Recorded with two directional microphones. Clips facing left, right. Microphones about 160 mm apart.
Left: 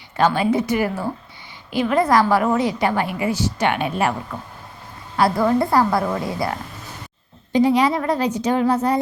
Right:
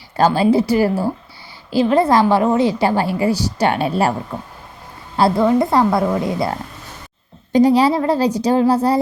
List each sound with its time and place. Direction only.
0.2 s a woman's voice: 35° right (ahead or behind)
7.5 s a woman's voice: 35° right (ahead or behind)